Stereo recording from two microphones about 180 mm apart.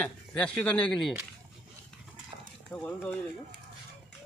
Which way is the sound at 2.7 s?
10° left (ahead or behind).